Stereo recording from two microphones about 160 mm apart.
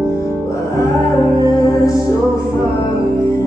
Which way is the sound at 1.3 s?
20° left (ahead or behind).